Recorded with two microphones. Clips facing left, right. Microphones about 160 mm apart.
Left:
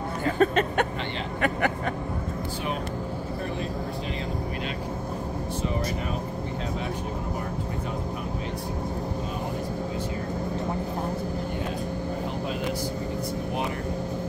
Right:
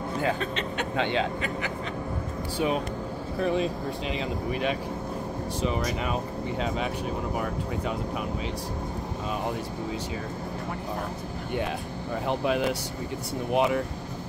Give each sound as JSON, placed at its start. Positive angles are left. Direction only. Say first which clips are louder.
{"t": 0.4, "sound": "speech", "louder": "left 8 dB", "side_deg": 50}